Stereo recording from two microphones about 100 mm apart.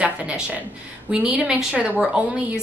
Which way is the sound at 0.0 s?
15° right (ahead or behind).